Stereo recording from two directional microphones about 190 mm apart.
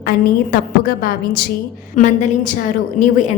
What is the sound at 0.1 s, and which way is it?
A woman's voice, 50° left (ahead or behind).